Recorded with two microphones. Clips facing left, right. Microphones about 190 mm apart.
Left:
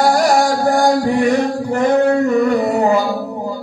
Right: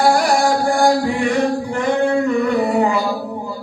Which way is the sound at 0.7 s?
40° left (ahead or behind).